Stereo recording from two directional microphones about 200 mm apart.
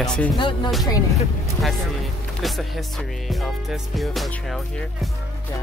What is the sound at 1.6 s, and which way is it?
Music, centre (ahead or behind).